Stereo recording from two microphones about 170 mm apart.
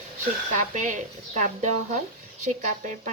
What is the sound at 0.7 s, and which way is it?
Speech, 45° right (ahead or behind).